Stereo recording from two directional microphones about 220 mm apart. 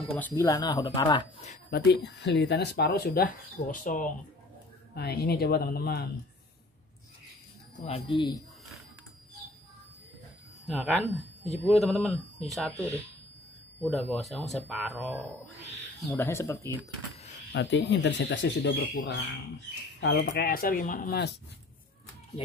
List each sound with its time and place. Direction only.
0.1 s speech: 10° left (ahead or behind)
1.7 s speech: 50° left (ahead or behind)
7.8 s speech: 25° left (ahead or behind)
10.7 s speech: centre (ahead or behind)
13.8 s speech: centre (ahead or behind)
16.1 s speech: 10° left (ahead or behind)
17.5 s speech: 55° left (ahead or behind)
20.0 s speech: 50° left (ahead or behind)